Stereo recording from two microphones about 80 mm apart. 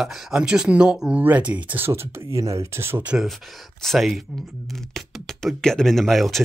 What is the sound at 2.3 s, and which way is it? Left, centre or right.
Speech, right.